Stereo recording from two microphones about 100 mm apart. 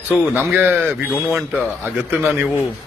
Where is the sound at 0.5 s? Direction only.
20° right (ahead or behind).